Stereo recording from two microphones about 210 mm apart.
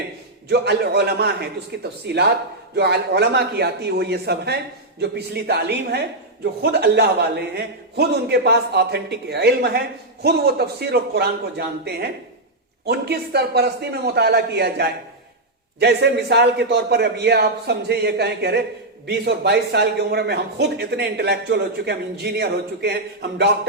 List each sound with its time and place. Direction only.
0.4 s a man's voice: 50° right (ahead or behind)